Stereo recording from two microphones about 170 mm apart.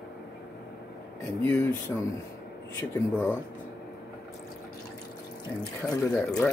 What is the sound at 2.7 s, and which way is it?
Speech, 10° left (ahead or behind).